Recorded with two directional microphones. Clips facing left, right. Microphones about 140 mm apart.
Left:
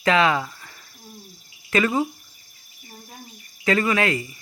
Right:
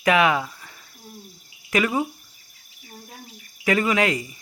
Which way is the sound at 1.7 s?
10° right (ahead or behind).